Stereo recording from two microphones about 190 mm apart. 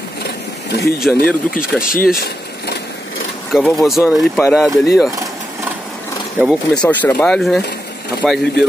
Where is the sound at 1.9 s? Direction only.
50° left (ahead or behind).